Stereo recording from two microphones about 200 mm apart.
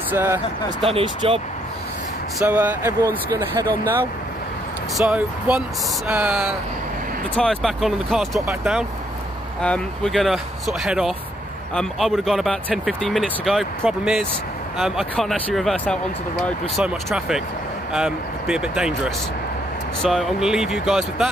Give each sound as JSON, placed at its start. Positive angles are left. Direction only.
{"t": 0.1, "sound": "speech", "side_deg": -10}
{"t": 0.9, "sound": "speech", "side_deg": -25}
{"t": 2.3, "sound": "speech", "side_deg": -10}